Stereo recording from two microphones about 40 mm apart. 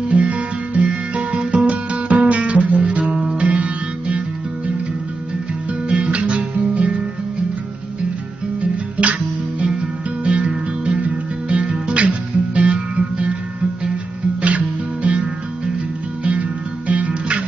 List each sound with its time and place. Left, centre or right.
0.3 s music: right
5.9 s guitar: right
8.5 s music: right
10.2 s music: right
14.4 s music: right
16.3 s music: right